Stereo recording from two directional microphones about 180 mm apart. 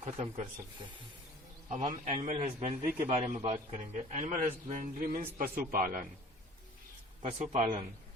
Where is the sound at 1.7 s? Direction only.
40° right (ahead or behind).